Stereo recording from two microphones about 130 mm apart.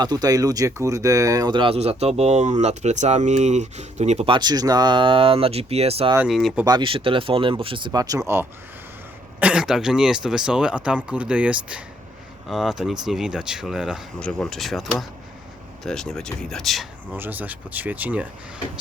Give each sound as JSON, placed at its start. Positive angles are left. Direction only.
{"t": 0.0, "sound": "speech", "side_deg": -30}
{"t": 4.3, "sound": "speech", "side_deg": -35}
{"t": 6.2, "sound": "speech", "side_deg": 0}
{"t": 6.7, "sound": "speech", "side_deg": -40}
{"t": 9.4, "sound": "speech", "side_deg": -5}
{"t": 14.2, "sound": "speech", "side_deg": 5}
{"t": 17.1, "sound": "speech", "side_deg": -15}